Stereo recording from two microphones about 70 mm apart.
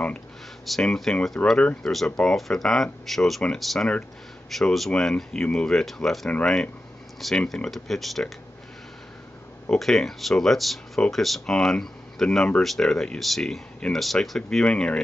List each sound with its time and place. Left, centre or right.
0.8 s speech: centre
1.4 s speech: left
1.8 s speech: centre
9.7 s speech: centre
14.7 s speech: centre